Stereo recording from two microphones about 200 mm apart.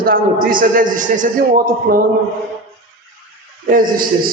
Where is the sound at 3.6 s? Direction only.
45° right (ahead or behind).